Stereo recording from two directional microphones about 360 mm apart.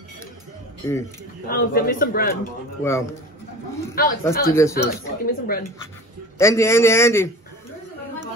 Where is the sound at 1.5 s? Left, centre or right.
Left.